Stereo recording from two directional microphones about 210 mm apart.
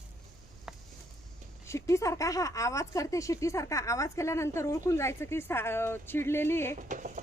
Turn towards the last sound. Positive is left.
turn(degrees=-40)  # may be behind; listen again after turning